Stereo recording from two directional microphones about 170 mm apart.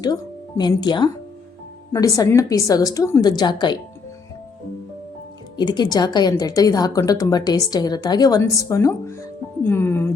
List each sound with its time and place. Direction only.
0.0 s a woman's voice: 25° left (ahead or behind)
5.5 s a woman's voice: 25° left (ahead or behind)